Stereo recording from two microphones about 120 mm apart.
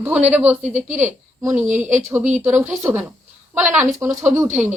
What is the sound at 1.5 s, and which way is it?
Speech, 90° right.